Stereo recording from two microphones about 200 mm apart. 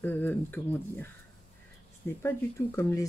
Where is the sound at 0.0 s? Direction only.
10° left (ahead or behind).